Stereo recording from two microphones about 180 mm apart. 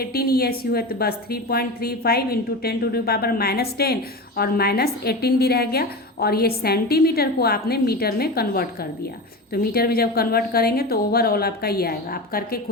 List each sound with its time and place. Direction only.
0.0 s a woman's voice: 60° left (ahead or behind)